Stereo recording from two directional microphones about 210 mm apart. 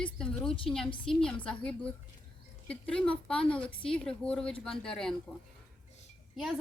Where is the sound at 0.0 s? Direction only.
5° left (ahead or behind).